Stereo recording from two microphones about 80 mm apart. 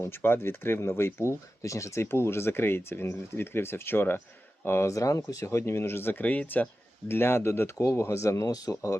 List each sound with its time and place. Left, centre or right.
0.0 s speech: left
7.1 s speech: left